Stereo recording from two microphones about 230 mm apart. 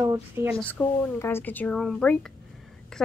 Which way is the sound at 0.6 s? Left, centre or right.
Centre.